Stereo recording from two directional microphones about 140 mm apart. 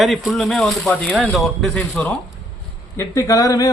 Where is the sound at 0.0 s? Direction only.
Centre (ahead or behind).